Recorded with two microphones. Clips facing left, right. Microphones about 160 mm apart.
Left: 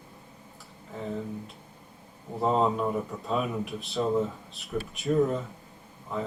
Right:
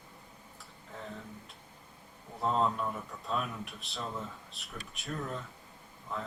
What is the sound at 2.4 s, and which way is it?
Speech, centre (ahead or behind).